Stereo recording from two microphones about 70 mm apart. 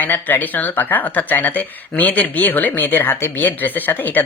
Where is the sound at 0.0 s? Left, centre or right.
Left.